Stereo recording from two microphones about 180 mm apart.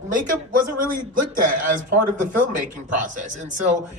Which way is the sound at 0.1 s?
45° right (ahead or behind).